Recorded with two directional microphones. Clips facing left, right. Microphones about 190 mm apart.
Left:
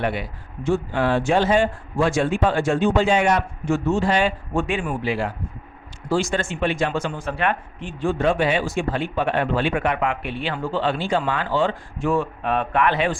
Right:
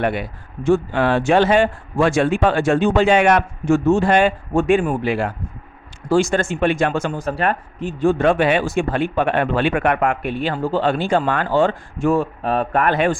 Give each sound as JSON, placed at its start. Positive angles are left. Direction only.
{"t": 0.0, "sound": "speech", "side_deg": -50}
{"t": 3.7, "sound": "speech", "side_deg": -50}
{"t": 8.2, "sound": "speech", "side_deg": -60}